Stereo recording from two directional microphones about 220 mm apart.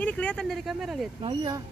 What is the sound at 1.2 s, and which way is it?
Speech, 20° right (ahead or behind).